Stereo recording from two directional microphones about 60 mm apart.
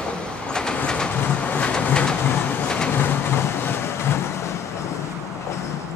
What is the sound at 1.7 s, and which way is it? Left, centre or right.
Train, centre.